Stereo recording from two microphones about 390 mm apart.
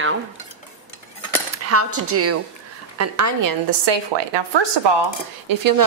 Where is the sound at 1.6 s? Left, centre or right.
Right.